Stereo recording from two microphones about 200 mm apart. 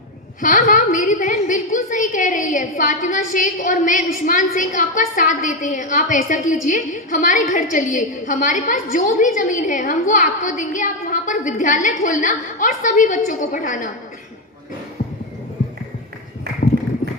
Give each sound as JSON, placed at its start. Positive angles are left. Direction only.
{"t": 0.3, "sound": "a woman's voice", "side_deg": 40}